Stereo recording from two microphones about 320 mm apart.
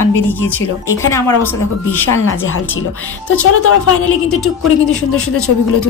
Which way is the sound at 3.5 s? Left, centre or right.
Left.